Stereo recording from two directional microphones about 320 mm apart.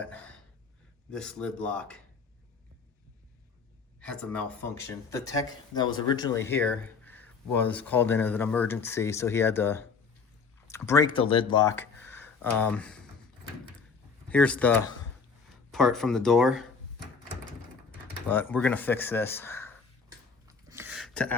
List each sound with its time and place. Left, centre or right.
0.0 s a sound: centre
1.1 s speech: centre
4.0 s speech: centre
14.3 s speech: centre
18.3 s speech: centre
20.5 s a sound: centre